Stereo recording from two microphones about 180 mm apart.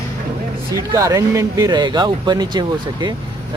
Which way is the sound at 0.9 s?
20° right (ahead or behind).